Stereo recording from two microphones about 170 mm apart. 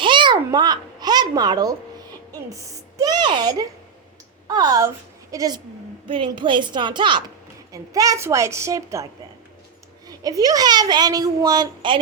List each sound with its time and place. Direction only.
0.0 s babbling: 30° right (ahead or behind)
2.5 s a sound: 20° right (ahead or behind)
4.4 s a woman's voice: 25° right (ahead or behind)
10.1 s a woman's voice: 20° right (ahead or behind)